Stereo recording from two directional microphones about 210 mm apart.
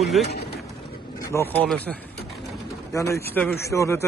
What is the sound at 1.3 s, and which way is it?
Speech, 10° left (ahead or behind).